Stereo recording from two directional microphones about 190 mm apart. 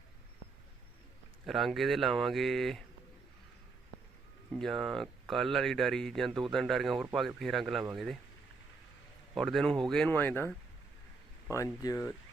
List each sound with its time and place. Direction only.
1.5 s speech: centre (ahead or behind)
4.5 s speech: centre (ahead or behind)
9.3 s speech: centre (ahead or behind)
11.5 s speech: 20° left (ahead or behind)